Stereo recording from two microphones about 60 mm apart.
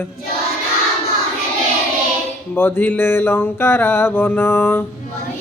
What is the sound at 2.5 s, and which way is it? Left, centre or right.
Mantra, left.